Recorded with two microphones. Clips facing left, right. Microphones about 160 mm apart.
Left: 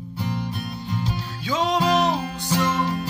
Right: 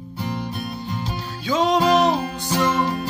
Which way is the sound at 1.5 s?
45° right (ahead or behind).